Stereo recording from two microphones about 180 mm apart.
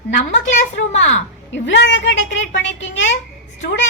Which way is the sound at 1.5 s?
85° left.